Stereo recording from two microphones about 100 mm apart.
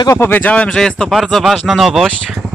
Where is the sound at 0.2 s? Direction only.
20° left (ahead or behind).